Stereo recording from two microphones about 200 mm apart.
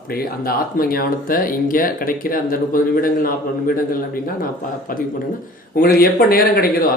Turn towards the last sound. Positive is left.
turn(degrees=50)  # may be behind; listen again after turning